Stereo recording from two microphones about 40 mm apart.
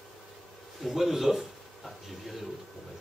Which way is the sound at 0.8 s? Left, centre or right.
Centre.